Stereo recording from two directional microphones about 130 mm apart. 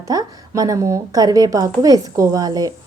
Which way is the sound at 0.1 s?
30° right (ahead or behind).